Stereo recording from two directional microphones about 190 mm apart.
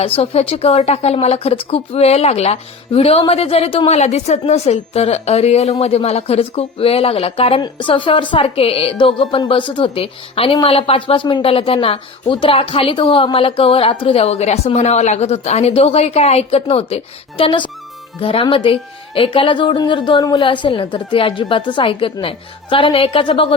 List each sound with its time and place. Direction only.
0.0 s a woman's voice: 30° left (ahead or behind)